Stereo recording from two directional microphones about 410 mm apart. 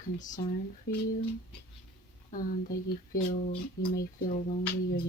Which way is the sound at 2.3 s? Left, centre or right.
Left.